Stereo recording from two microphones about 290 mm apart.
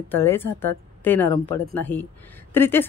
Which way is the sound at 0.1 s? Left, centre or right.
Centre.